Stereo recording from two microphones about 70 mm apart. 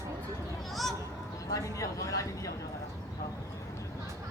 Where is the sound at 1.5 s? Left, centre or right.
Left.